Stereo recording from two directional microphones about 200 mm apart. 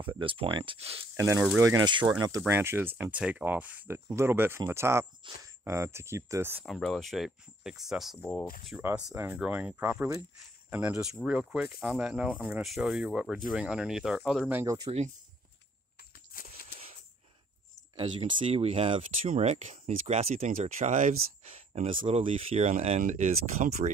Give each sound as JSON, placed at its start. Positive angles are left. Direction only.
{"t": 0.0, "sound": "speech", "side_deg": -25}
{"t": 1.1, "sound": "speech", "side_deg": -15}
{"t": 5.2, "sound": "speech", "side_deg": -25}
{"t": 6.6, "sound": "speech", "side_deg": 0}
{"t": 8.8, "sound": "speech", "side_deg": -10}
{"t": 16.3, "sound": "walk", "side_deg": 45}
{"t": 17.9, "sound": "speech", "side_deg": -25}